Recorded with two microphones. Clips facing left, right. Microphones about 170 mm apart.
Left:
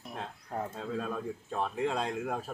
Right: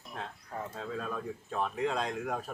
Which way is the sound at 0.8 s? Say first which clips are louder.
Left 2 dB; centre (ahead or behind).